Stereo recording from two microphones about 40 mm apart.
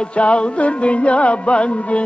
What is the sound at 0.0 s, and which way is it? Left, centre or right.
Music, left.